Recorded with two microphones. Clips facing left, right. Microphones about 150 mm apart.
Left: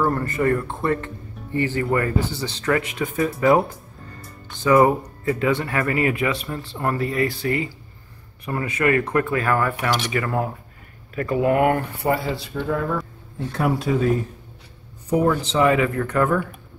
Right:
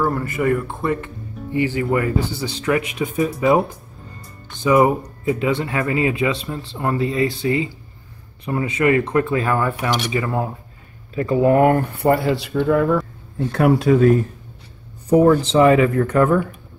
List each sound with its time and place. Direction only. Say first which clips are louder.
0.0 s speech: right 1 dB; 5° right (ahead or behind)
4.6 s speech: right 1 dB; 15° right (ahead or behind)
9.8 s speech: right 1 dB; 5° right (ahead or behind)
10.0 s speech: right 1 dB; 20° right (ahead or behind); by 11.8 s 40° right (ahead or behind)
12.0 s a man's voice: right 5 dB; 55° right (ahead or behind)
15.0 s speech: right 6 dB; 35° right (ahead or behind)